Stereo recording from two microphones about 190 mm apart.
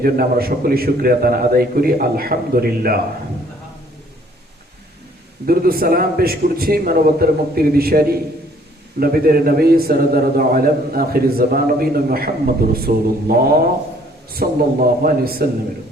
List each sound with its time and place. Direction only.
0.0 s a man's voice: 50° right (ahead or behind)
5.5 s a man's voice: 50° right (ahead or behind)